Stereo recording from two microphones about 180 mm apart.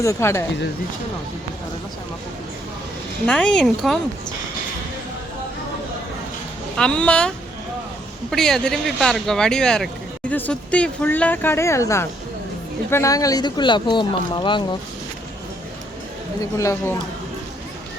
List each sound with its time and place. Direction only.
0.0 s speech: 15° left (ahead or behind)
3.2 s speech: 5° left (ahead or behind)
6.7 s speech: 5° left (ahead or behind); by 14.8 s 25° left (ahead or behind)
16.4 s speech: 15° left (ahead or behind)